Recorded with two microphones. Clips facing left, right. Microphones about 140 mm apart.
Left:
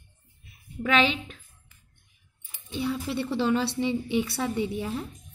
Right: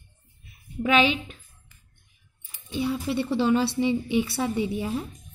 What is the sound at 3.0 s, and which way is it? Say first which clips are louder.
A woman's voice: right 4 dB; 5° right (ahead or behind).